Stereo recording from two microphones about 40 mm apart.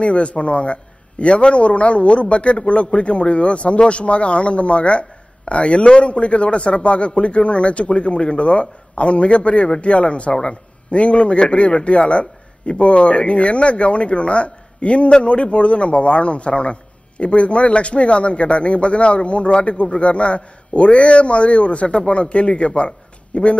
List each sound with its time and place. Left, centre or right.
0.0 s a man's voice: left